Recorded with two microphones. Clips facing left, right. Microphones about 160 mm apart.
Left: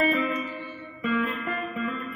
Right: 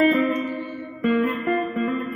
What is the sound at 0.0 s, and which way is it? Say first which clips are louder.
Music: right 6 dB; 45° right (ahead or behind).